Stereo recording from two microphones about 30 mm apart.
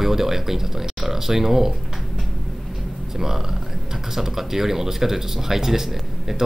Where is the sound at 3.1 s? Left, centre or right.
Centre.